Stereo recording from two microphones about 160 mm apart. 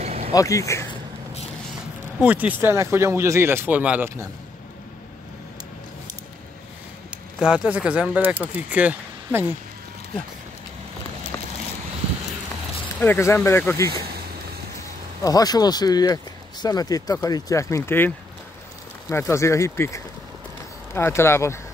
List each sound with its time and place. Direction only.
0.0 s a sound: 40° right (ahead or behind)
0.3 s speech: 20° left (ahead or behind)
2.1 s speech: 10° right (ahead or behind)
7.3 s speech: 5° right (ahead or behind)
13.0 s speech: 15° left (ahead or behind)
15.2 s speech: 25° left (ahead or behind)